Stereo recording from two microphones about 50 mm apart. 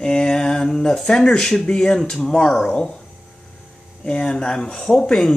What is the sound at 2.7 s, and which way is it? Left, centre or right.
Speech, left.